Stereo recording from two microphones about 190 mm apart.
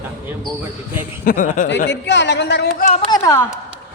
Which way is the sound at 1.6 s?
65° left (ahead or behind).